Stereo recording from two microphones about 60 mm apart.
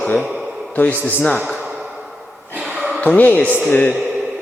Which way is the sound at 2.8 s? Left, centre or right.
Centre.